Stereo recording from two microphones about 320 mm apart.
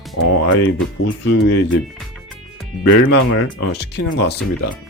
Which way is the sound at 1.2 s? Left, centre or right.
Left.